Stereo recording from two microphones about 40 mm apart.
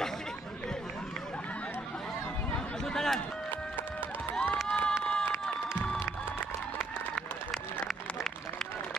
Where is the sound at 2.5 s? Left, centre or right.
Centre.